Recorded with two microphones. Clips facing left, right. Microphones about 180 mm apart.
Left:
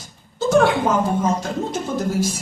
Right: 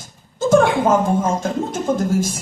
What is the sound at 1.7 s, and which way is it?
Speech, 50° right (ahead or behind).